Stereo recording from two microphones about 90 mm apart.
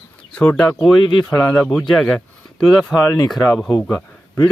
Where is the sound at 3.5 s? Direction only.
20° left (ahead or behind).